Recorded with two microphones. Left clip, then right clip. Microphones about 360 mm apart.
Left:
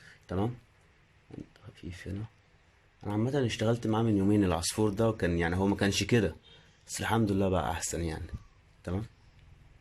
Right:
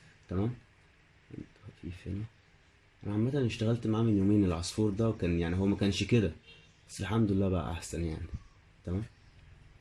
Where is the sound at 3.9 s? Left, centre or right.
Left.